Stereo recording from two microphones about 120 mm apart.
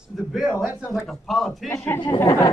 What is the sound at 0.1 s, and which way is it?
A man's voice, 5° left (ahead or behind).